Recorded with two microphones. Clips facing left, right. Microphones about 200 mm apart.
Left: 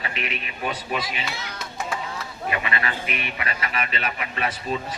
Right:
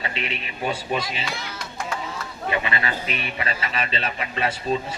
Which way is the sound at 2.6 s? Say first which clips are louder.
Right 1 dB; 30° right (ahead or behind).